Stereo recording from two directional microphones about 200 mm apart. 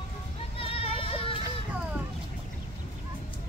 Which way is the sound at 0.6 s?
30° left (ahead or behind).